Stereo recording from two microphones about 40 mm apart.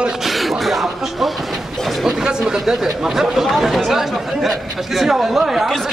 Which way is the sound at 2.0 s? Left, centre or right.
Centre.